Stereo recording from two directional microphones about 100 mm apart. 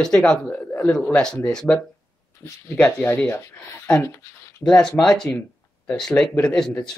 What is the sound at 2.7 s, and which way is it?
Speech, 20° left (ahead or behind).